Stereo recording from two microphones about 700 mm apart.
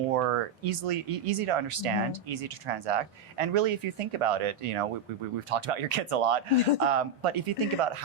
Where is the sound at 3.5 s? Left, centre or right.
Right.